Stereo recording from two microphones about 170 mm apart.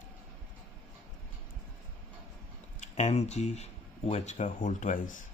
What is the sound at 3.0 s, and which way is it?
Speech, 40° left (ahead or behind).